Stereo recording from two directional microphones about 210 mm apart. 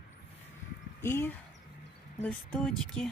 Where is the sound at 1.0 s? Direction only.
10° left (ahead or behind).